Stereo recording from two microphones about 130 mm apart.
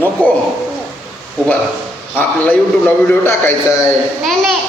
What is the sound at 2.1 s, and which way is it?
A man's voice, 10° left (ahead or behind).